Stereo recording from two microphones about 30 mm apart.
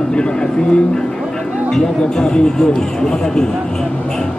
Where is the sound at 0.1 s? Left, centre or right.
Left.